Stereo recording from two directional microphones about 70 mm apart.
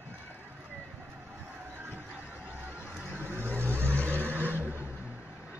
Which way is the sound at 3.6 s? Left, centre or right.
Right.